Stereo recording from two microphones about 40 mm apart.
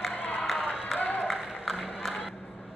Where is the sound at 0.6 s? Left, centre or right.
Right.